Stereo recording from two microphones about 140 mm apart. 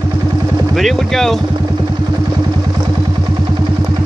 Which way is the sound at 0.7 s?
Centre (ahead or behind).